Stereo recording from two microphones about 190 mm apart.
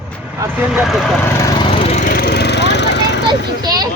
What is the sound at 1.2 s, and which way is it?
Speech, 15° left (ahead or behind).